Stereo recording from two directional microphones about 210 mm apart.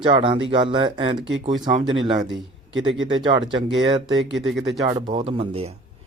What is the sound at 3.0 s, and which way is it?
Speech, 25° right (ahead or behind).